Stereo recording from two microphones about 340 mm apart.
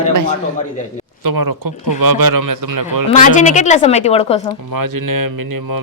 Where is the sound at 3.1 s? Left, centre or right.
Left.